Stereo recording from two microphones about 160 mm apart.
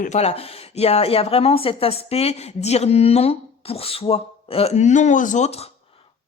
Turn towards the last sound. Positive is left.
turn(degrees=50)  # may be behind; listen again after turning